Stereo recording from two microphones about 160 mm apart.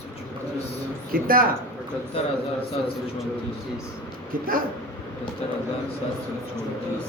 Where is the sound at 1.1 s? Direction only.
60° right (ahead or behind).